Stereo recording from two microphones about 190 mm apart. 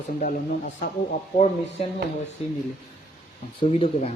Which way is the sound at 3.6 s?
30° left (ahead or behind).